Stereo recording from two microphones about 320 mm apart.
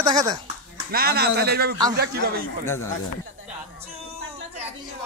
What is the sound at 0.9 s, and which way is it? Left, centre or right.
A man's voice, right.